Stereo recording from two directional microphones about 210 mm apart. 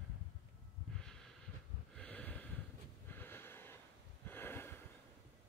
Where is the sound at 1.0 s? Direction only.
5° left (ahead or behind).